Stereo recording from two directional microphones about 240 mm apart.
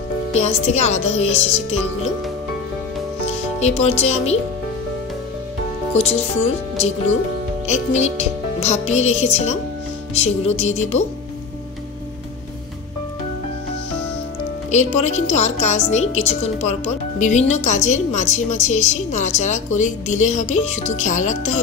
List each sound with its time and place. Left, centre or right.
0.3 s a woman's voice: left
3.5 s a woman's voice: left
5.9 s a woman's voice: left
7.6 s a woman's voice: left
14.7 s a woman's voice: left